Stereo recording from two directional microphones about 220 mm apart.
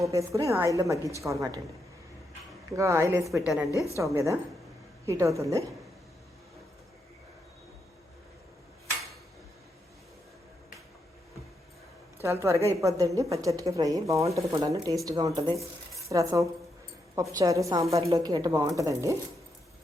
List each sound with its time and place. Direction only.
0.0 s a woman's voice: 15° right (ahead or behind)
2.7 s a woman's voice: 15° right (ahead or behind)
3.3 s a woman's voice: centre (ahead or behind)
3.9 s a woman's voice: 15° right (ahead or behind)
12.2 s a woman's voice: 15° right (ahead or behind)